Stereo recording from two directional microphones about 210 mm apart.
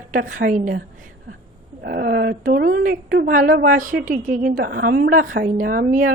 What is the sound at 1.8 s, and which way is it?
A woman's voice, 45° right (ahead or behind).